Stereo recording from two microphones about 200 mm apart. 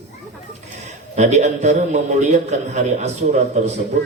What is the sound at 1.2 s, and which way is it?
A man's voice, 35° right (ahead or behind).